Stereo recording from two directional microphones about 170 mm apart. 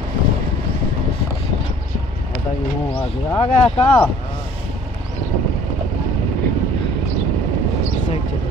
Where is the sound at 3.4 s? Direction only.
35° left (ahead or behind).